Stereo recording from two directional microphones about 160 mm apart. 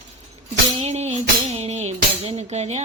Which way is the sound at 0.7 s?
45° right (ahead or behind).